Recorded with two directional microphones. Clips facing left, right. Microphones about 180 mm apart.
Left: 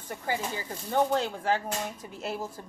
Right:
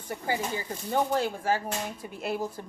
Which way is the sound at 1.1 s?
10° right (ahead or behind).